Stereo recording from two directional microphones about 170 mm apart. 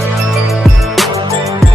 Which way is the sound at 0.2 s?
Centre (ahead or behind).